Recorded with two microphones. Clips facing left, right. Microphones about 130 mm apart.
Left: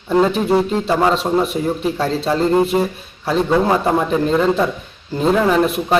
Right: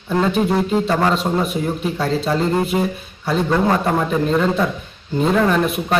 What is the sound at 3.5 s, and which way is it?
Speech, 10° left (ahead or behind).